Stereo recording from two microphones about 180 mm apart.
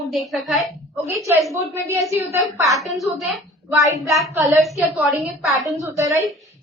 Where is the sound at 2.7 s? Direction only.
Centre (ahead or behind).